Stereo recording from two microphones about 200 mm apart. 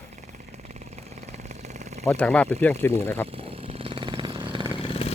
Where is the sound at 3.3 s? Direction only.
30° right (ahead or behind).